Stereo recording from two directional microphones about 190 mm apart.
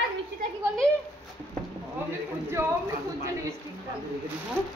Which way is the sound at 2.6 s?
15° right (ahead or behind).